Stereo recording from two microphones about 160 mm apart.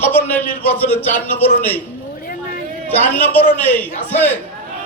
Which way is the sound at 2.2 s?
65° left (ahead or behind).